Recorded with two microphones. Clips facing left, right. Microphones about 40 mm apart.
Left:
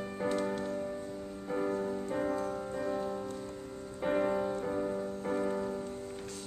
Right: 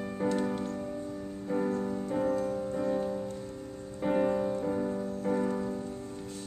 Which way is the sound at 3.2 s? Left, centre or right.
Centre.